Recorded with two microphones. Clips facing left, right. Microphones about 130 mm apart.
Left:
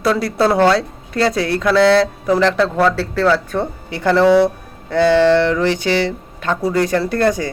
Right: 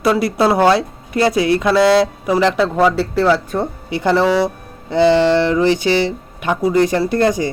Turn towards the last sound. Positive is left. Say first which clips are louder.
# right 1 dB
turn(degrees=-15)  # may be behind; listen again after turning